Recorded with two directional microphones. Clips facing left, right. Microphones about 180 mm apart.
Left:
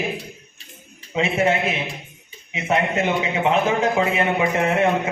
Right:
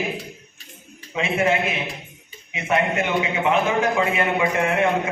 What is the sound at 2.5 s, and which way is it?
A man's voice, 25° left (ahead or behind).